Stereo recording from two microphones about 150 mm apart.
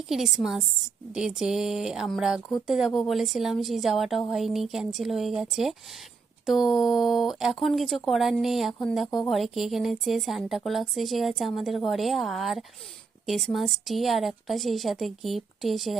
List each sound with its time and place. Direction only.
0.1 s a woman's voice: centre (ahead or behind)